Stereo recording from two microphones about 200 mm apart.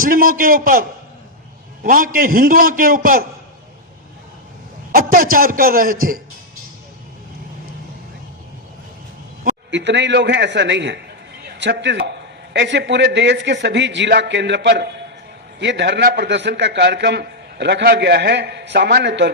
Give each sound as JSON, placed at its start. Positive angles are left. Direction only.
{"t": 0.0, "sound": "a man's voice", "side_deg": -45}
{"t": 4.9, "sound": "a man's voice", "side_deg": -45}
{"t": 9.7, "sound": "a man's voice", "side_deg": -60}